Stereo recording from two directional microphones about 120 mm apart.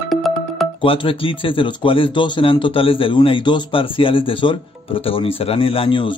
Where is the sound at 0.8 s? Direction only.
50° left (ahead or behind).